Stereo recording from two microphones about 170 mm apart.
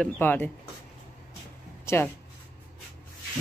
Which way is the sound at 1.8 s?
15° left (ahead or behind).